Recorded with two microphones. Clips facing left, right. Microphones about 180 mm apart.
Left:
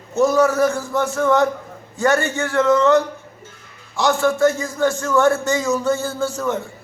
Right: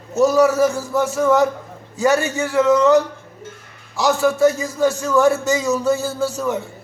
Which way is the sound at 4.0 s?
5° right (ahead or behind).